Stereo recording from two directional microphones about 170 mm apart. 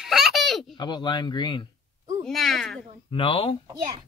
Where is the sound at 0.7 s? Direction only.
25° left (ahead or behind).